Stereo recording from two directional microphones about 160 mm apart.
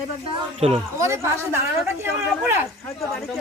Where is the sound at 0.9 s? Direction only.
15° right (ahead or behind).